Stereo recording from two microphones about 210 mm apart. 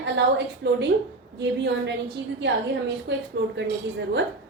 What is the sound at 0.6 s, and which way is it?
A woman's voice, 55° right (ahead or behind).